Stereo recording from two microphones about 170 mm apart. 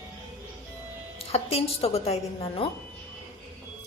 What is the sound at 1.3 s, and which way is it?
A woman's voice, 35° left (ahead or behind).